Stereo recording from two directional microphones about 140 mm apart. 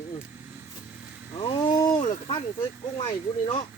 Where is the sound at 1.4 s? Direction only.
35° left (ahead or behind).